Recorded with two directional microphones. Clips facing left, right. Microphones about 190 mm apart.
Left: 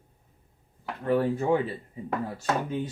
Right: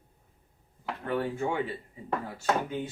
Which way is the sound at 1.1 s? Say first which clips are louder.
Left 6 dB; 35° left (ahead or behind).